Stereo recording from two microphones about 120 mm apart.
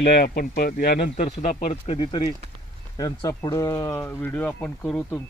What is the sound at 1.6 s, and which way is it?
Speech, 50° left (ahead or behind).